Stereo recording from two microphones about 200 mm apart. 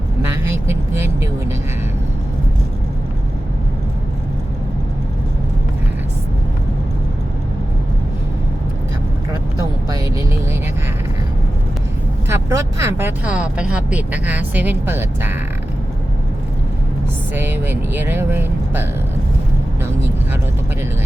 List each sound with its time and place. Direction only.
0.3 s vehicle: 10° right (ahead or behind)
9.9 s vehicle: 15° right (ahead or behind)
12.3 s speech: 15° right (ahead or behind)
17.3 s speech: 10° right (ahead or behind)